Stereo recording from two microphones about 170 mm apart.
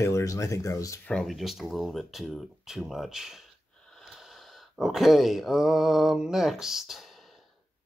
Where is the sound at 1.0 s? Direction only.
5° left (ahead or behind).